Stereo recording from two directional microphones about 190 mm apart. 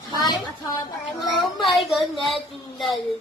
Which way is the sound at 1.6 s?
Centre (ahead or behind).